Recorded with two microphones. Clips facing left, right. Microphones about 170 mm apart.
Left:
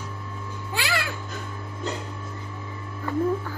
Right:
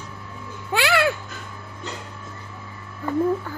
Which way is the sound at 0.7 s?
70° right (ahead or behind).